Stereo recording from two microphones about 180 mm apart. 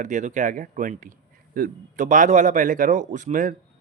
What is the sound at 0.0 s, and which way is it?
A man's voice, 45° right (ahead or behind).